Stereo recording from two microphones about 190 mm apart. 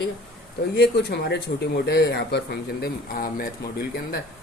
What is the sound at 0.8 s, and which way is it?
Speech, 60° left (ahead or behind).